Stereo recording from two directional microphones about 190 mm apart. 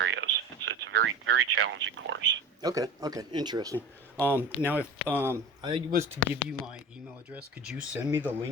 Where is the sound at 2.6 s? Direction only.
20° right (ahead or behind).